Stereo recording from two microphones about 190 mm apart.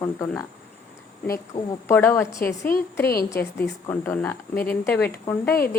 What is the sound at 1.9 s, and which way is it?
Speech, 10° left (ahead or behind).